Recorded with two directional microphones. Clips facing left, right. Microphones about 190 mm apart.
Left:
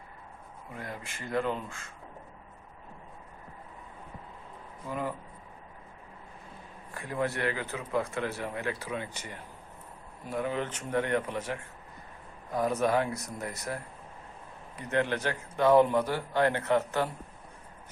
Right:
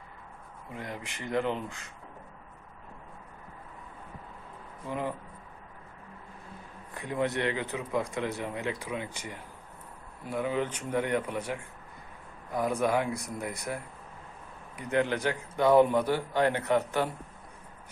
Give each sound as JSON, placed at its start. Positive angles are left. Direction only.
{"t": 0.7, "sound": "speech", "side_deg": -20}
{"t": 4.9, "sound": "speech", "side_deg": -20}
{"t": 6.9, "sound": "speech", "side_deg": -20}